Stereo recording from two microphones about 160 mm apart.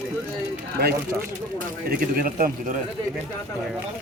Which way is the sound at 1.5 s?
60° right (ahead or behind).